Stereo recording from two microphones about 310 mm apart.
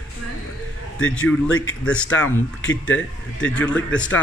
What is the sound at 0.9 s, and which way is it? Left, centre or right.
Speech, left.